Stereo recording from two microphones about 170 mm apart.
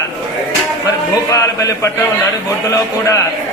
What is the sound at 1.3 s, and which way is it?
Speech, 20° left (ahead or behind).